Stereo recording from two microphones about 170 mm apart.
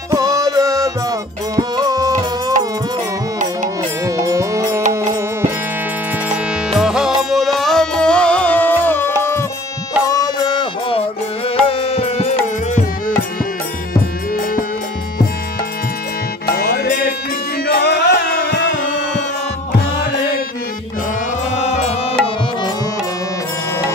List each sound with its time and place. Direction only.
0.1 s music: 20° right (ahead or behind)
4.0 s music: 20° right (ahead or behind)
6.3 s music: 5° right (ahead or behind); by 12.4 s 35° left (ahead or behind)
16.5 s music: 65° left (ahead or behind); by 19.2 s 90° left
21.5 s music: 45° left (ahead or behind)